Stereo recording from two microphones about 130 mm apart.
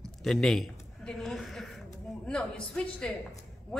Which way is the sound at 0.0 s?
5° left (ahead or behind).